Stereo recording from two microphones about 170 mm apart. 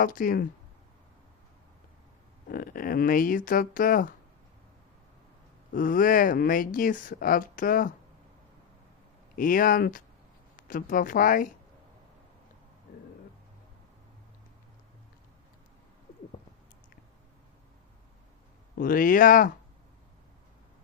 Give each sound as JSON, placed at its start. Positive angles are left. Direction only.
{"t": 0.0, "sound": "speech", "side_deg": 55}
{"t": 2.5, "sound": "speech", "side_deg": 55}
{"t": 5.7, "sound": "speech", "side_deg": 55}
{"t": 9.3, "sound": "speech", "side_deg": 55}
{"t": 18.8, "sound": "speech", "side_deg": 55}